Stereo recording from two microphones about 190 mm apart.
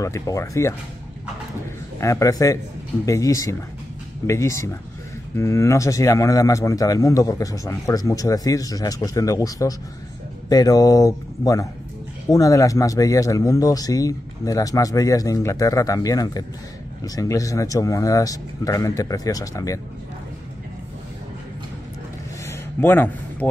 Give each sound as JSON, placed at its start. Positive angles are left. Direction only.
{"t": 0.0, "sound": "speech", "side_deg": 15}
{"t": 2.0, "sound": "speech", "side_deg": 15}
{"t": 22.5, "sound": "a sound", "side_deg": 10}